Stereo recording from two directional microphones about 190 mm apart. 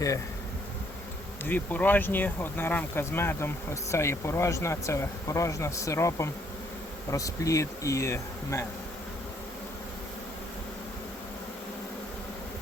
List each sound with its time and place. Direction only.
1.5 s speech: 10° left (ahead or behind)